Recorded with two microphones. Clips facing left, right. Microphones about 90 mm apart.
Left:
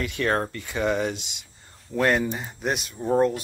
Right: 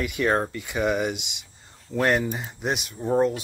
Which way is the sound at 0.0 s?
15° right (ahead or behind).